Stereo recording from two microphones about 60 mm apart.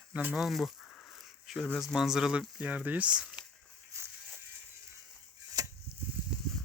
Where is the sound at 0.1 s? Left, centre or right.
Right.